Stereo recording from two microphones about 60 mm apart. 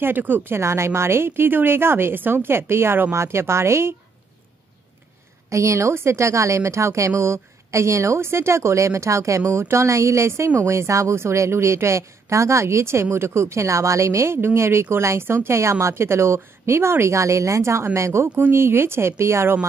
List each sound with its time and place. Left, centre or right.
0.0 s speech: right
0.6 s speech: right
5.5 s a woman's voice: right
9.4 s speech: right
14.3 s a woman's voice: right
18.2 s speech: right